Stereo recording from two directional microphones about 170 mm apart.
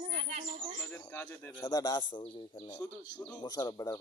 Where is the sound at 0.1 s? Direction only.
45° right (ahead or behind).